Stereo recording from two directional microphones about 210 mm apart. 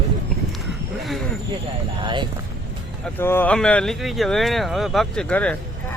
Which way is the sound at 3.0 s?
10° left (ahead or behind).